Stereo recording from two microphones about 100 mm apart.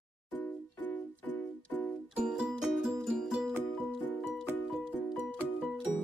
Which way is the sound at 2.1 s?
10° right (ahead or behind).